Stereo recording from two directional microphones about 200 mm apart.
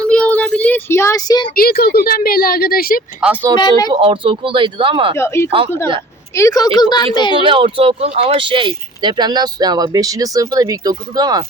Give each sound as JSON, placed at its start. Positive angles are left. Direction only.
{"t": 0.1, "sound": "child singing", "side_deg": 5}
{"t": 1.5, "sound": "a woman's voice", "side_deg": 50}
{"t": 3.2, "sound": "speech", "side_deg": -5}
{"t": 3.6, "sound": "a woman's voice", "side_deg": 20}
{"t": 4.0, "sound": "speech", "side_deg": -25}
{"t": 5.1, "sound": "a woman's voice", "side_deg": 15}
{"t": 7.3, "sound": "speech", "side_deg": -25}